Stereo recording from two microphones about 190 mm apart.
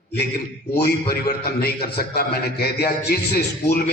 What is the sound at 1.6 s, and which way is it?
A man's voice, 55° left (ahead or behind).